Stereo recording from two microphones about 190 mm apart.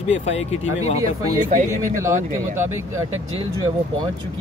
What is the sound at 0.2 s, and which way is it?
Speech, 35° left (ahead or behind).